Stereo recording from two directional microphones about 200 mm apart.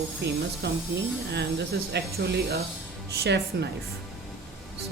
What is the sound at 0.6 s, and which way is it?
Speech, 55° right (ahead or behind).